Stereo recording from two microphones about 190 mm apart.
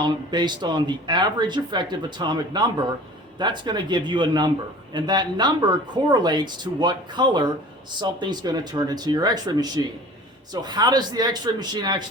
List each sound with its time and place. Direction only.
0.0 s speech: 25° right (ahead or behind)